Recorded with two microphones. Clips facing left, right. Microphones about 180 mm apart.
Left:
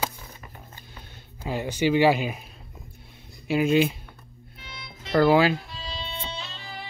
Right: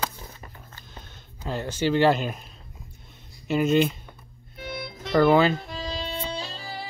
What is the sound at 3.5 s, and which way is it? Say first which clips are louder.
Speech: even; 5° left (ahead or behind).